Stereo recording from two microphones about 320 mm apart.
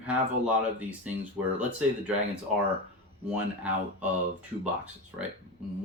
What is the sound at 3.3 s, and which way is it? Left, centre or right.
Speech, centre.